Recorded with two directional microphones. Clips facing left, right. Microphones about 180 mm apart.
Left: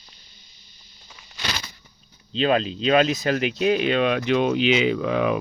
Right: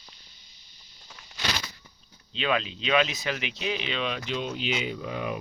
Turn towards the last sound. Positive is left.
turn(degrees=90)